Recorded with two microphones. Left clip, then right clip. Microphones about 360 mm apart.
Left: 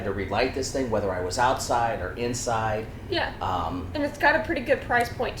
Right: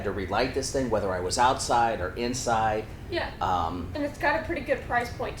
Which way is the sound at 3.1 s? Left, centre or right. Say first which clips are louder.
Even; left.